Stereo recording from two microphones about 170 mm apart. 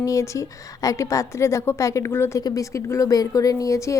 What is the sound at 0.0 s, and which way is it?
A woman's voice, 20° left (ahead or behind).